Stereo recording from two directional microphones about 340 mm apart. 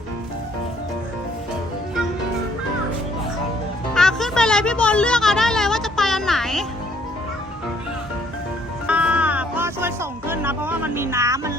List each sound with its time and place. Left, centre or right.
3.9 s music: centre
8.9 s music: centre